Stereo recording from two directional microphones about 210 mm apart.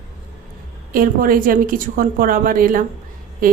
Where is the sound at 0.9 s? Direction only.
40° right (ahead or behind).